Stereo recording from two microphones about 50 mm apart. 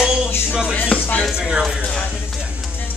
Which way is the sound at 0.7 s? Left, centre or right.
Left.